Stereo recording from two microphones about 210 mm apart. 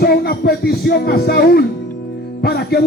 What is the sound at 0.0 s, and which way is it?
Speech, 45° left (ahead or behind).